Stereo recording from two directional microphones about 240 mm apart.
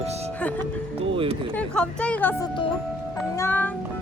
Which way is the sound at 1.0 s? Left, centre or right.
Right.